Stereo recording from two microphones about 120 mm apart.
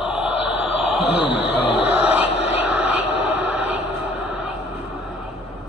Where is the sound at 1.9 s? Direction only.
10° right (ahead or behind).